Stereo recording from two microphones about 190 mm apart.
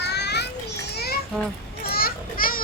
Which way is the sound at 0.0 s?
60° left (ahead or behind).